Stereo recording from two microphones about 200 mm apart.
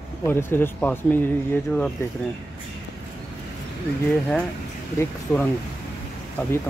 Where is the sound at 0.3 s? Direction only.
10° left (ahead or behind).